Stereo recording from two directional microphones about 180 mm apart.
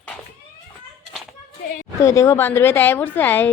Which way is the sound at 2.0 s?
15° left (ahead or behind).